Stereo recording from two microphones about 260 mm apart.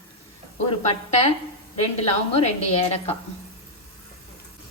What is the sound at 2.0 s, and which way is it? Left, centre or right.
Speech, left.